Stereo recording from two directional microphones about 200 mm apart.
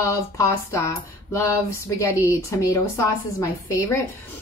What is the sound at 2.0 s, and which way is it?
A woman's voice, 15° left (ahead or behind).